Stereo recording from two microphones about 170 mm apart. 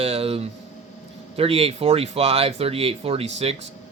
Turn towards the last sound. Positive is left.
turn(degrees=-40)  # may be behind; listen again after turning